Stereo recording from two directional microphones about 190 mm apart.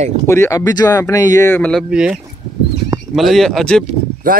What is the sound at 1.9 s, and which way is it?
Speech, 5° right (ahead or behind).